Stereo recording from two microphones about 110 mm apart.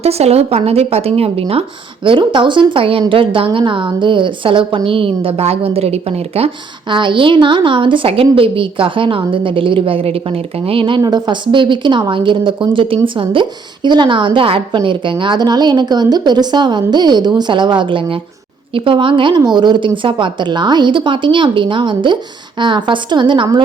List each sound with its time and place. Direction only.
0.0 s a woman's voice: 70° right (ahead or behind)
2.0 s a woman's voice: 45° right (ahead or behind); by 6.5 s 65° right (ahead or behind)
6.9 s speech: 45° right (ahead or behind)
11.0 s speech: 40° right (ahead or behind)